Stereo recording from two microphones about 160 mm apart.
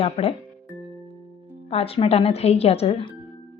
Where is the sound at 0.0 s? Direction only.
40° left (ahead or behind).